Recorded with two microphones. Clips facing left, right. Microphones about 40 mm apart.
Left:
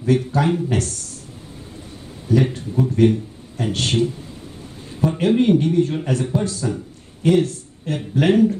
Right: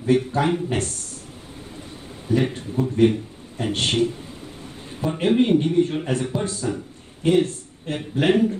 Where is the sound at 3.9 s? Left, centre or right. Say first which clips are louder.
Left 3 dB; right.